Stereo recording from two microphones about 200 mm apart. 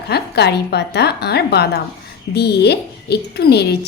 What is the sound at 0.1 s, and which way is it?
A woman's voice, 55° left (ahead or behind).